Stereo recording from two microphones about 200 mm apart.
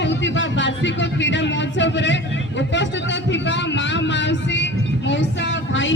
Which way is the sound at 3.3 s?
65° left (ahead or behind).